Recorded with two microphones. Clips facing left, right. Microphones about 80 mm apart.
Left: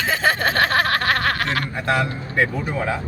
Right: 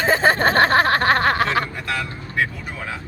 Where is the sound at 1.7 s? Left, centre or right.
Left.